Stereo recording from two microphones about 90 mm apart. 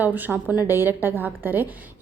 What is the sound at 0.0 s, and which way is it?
A woman's voice, 20° right (ahead or behind).